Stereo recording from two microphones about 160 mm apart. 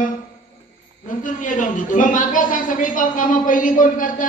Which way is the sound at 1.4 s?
55° left (ahead or behind).